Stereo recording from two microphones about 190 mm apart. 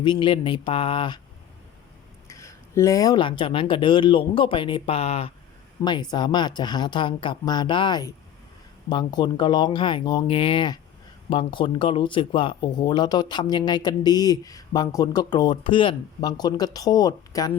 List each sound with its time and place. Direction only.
0.0 s speech: 25° left (ahead or behind)
2.2 s speech: 15° left (ahead or behind)